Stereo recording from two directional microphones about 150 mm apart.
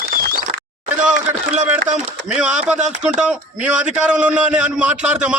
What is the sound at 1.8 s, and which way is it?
Speech, 55° right (ahead or behind).